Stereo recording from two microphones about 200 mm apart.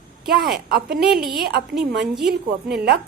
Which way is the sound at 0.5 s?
55° right (ahead or behind).